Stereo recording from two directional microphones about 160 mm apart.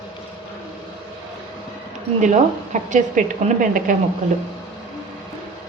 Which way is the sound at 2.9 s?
55° right (ahead or behind).